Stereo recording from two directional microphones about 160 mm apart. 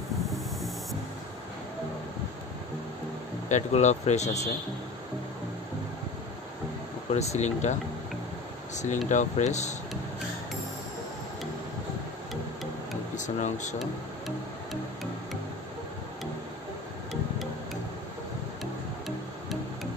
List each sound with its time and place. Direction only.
3.4 s speech: 45° left (ahead or behind)
7.1 s speech: 45° left (ahead or behind)
8.7 s speech: 50° left (ahead or behind)
13.1 s speech: 50° left (ahead or behind)
13.7 s music: centre (ahead or behind)